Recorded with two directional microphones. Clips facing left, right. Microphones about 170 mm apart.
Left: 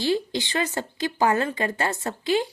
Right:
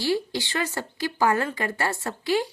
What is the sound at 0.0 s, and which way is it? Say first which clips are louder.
A woman's voice: left 1 dB; 20° left (ahead or behind).